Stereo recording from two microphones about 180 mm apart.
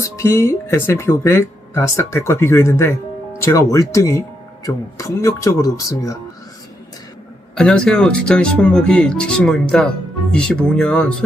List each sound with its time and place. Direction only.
0.0 s speech: 15° left (ahead or behind)
7.5 s speech: 5° left (ahead or behind)